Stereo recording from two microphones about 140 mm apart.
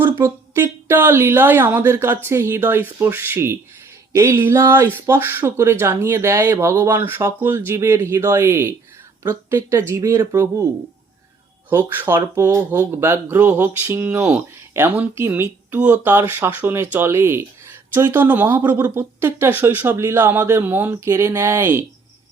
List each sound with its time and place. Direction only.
0.0 s speech: 20° right (ahead or behind)
11.7 s speech: 15° right (ahead or behind)